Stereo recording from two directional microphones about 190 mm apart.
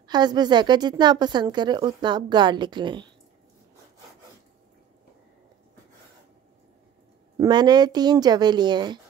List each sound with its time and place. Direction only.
0.0 s a woman's voice: 20° right (ahead or behind)
7.3 s a woman's voice: 20° right (ahead or behind)